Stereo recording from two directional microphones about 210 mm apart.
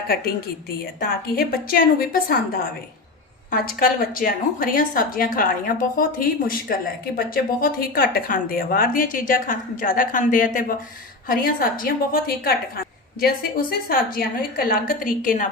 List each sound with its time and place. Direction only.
1.4 s a woman's voice: 45° left (ahead or behind)